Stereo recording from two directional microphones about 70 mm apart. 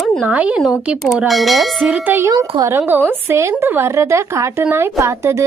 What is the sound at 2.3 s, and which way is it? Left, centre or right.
Speech, right.